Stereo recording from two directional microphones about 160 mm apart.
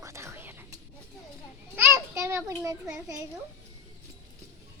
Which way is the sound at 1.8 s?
15° right (ahead or behind).